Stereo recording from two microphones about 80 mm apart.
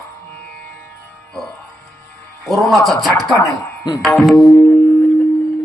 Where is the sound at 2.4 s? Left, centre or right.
Centre.